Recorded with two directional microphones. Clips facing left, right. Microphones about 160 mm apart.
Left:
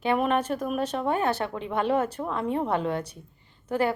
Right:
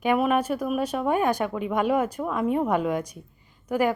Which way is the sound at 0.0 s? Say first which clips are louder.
Right 2 dB; 10° right (ahead or behind).